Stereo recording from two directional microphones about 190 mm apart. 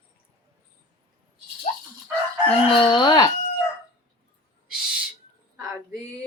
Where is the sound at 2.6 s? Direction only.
25° left (ahead or behind).